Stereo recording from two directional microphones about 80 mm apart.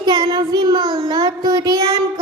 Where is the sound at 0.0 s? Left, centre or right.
Right.